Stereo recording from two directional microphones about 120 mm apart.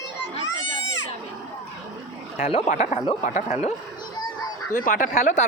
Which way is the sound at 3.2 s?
80° left.